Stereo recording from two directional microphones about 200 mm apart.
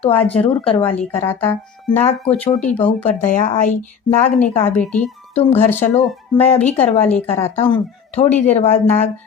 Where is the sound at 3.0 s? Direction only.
40° left (ahead or behind).